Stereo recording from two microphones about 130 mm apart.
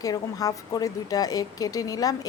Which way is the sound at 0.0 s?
30° left (ahead or behind).